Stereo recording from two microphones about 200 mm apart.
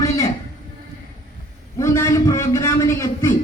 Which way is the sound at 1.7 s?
15° left (ahead or behind).